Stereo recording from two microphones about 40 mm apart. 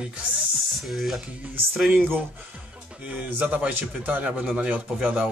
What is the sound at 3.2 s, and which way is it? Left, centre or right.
A man's voice, right.